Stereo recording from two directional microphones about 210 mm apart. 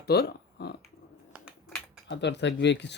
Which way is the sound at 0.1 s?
50° left (ahead or behind).